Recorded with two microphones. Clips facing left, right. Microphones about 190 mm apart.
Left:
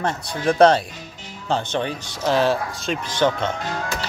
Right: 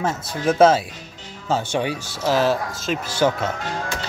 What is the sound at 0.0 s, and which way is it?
Speech, centre (ahead or behind).